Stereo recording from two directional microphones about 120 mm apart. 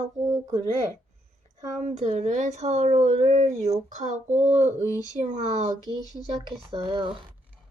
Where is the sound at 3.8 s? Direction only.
90° right.